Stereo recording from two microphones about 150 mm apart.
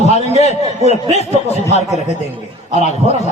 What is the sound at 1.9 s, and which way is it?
Speech, 45° right (ahead or behind).